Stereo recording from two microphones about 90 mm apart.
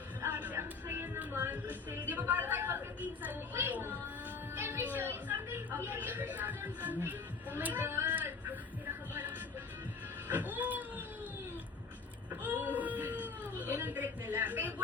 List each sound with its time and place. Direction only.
0.2 s music: 20° right (ahead or behind)
3.5 s a woman's voice: 25° right (ahead or behind)
10.2 s music: 20° right (ahead or behind)
12.3 s whimper: 20° right (ahead or behind)